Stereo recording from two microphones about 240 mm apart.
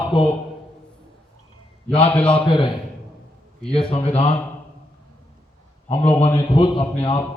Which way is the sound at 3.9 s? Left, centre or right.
Left.